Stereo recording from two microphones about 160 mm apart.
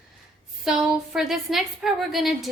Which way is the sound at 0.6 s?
Centre (ahead or behind).